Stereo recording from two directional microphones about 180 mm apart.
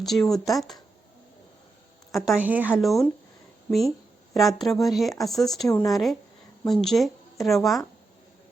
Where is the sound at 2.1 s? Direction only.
Centre (ahead or behind).